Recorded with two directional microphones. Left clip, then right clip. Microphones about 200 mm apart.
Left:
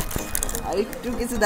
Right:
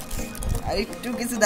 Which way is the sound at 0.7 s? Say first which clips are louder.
Left 1 dB; 50° right (ahead or behind).